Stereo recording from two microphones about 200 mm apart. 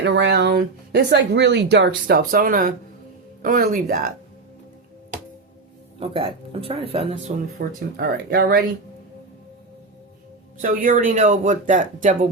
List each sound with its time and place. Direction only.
0.0 s speech: 60° right (ahead or behind); by 4.1 s 45° right (ahead or behind)
6.0 s speech: 25° right (ahead or behind)
7.6 s speech: 55° right (ahead or behind)
10.6 s speech: 40° right (ahead or behind)